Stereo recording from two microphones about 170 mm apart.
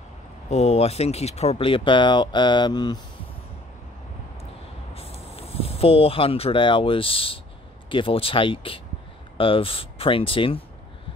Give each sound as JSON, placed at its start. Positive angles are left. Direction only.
{"t": 0.5, "sound": "speech", "side_deg": 40}
{"t": 4.9, "sound": "speech", "side_deg": 35}